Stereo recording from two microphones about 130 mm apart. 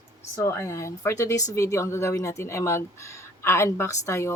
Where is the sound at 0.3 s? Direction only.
20° left (ahead or behind).